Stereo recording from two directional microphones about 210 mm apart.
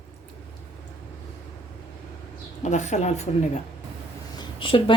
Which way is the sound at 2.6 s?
35° left (ahead or behind).